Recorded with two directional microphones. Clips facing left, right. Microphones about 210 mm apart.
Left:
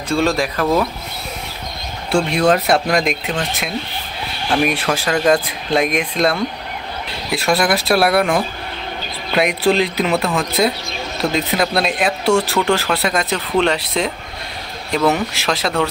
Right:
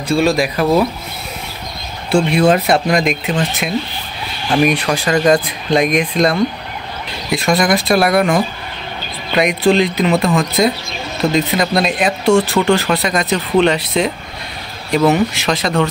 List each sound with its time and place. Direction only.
0.1 s speech: 10° right (ahead or behind)
2.0 s speech: centre (ahead or behind)